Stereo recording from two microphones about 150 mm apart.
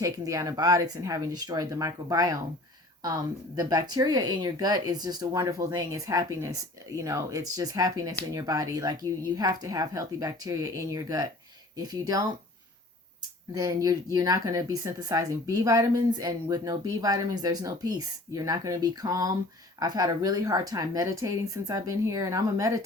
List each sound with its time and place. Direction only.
0.0 s speech: 20° right (ahead or behind)
13.5 s speech: 25° right (ahead or behind)